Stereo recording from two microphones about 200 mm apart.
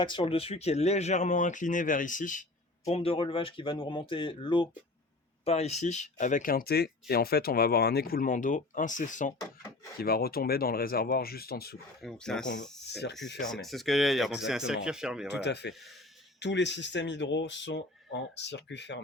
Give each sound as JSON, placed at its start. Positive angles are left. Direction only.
{"t": 0.0, "sound": "speech", "side_deg": 25}
{"t": 10.0, "sound": "speech", "side_deg": 50}
{"t": 12.0, "sound": "speech", "side_deg": 5}
{"t": 12.9, "sound": "speech", "side_deg": 55}
{"t": 13.4, "sound": "speech", "side_deg": 0}
{"t": 15.3, "sound": "speech", "side_deg": 60}